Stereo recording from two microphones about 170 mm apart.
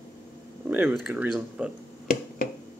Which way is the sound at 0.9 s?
Centre (ahead or behind).